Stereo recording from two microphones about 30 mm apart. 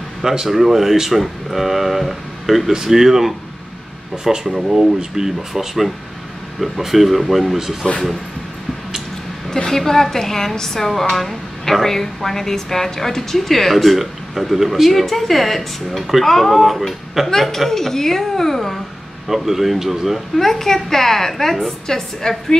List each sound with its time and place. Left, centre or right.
0.2 s speech: centre
9.7 s a woman's voice: centre
17.3 s a woman's voice: centre
19.2 s speech: centre
20.3 s a woman's voice: centre